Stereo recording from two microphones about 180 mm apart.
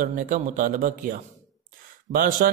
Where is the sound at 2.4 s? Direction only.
55° right (ahead or behind).